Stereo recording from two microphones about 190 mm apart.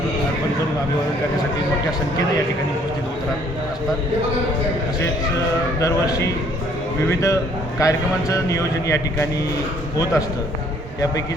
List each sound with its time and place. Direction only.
5.8 s a man's voice: 15° left (ahead or behind)